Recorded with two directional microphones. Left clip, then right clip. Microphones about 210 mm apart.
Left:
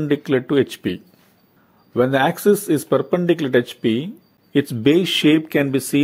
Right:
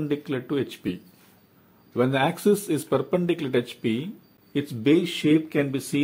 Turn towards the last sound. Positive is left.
turn(degrees=25)  # may be behind; listen again after turning